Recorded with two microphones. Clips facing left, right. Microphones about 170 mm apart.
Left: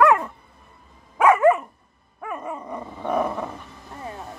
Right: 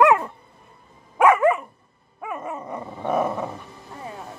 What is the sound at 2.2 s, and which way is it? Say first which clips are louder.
Dog: even; 5° right (ahead or behind).